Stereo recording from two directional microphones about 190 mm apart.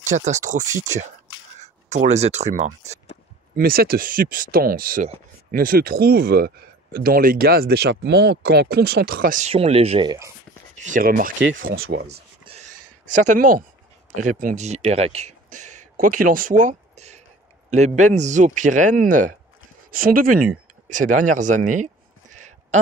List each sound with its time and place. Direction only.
0.0 s speech: 40° right (ahead or behind)
2.0 s speech: 35° right (ahead or behind)
3.5 s speech: 50° right (ahead or behind)
9.5 s speech: 30° right (ahead or behind)
10.8 s speech: 45° right (ahead or behind)
11.8 s speech: 60° right (ahead or behind)
12.5 s gasp: 25° right (ahead or behind)
13.1 s speech: 40° right (ahead or behind)
20.9 s a sound: 40° right (ahead or behind)